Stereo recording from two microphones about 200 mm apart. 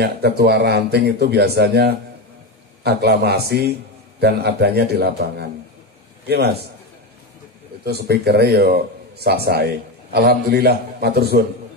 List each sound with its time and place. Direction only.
0.0 s speech: 50° right (ahead or behind)
7.8 s speech: 55° right (ahead or behind)